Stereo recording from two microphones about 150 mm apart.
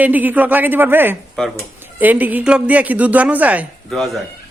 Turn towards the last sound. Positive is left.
turn(degrees=0)  # may be behind; listen again after turning